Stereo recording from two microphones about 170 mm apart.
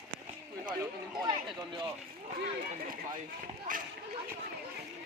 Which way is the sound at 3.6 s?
50° right (ahead or behind).